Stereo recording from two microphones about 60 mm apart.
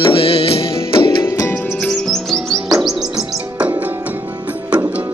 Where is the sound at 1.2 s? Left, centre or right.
Left.